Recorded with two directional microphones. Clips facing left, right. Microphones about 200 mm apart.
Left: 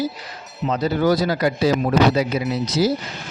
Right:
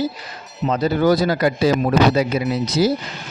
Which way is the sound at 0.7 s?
50° right (ahead or behind).